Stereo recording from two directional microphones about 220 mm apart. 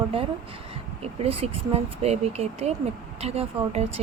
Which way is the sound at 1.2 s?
25° right (ahead or behind).